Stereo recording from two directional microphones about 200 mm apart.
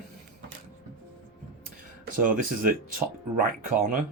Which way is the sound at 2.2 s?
45° right (ahead or behind).